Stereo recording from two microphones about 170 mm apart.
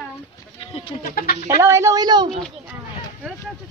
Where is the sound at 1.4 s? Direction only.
15° right (ahead or behind).